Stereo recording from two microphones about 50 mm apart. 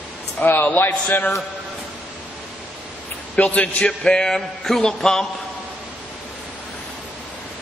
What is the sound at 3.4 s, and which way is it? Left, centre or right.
A man's voice, left.